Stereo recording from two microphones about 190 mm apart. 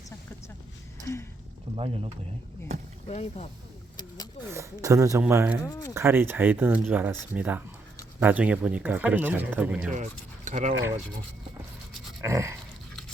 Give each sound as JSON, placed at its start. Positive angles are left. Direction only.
{"t": 1.7, "sound": "speech", "side_deg": -30}
{"t": 3.1, "sound": "speech", "side_deg": 35}
{"t": 4.5, "sound": "speech", "side_deg": -15}
{"t": 5.6, "sound": "speech", "side_deg": 15}
{"t": 5.9, "sound": "speech", "side_deg": -10}
{"t": 9.9, "sound": "speech", "side_deg": -40}
{"t": 12.2, "sound": "dog", "side_deg": -15}